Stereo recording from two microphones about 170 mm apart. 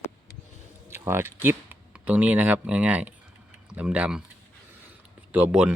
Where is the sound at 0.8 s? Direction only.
15° right (ahead or behind).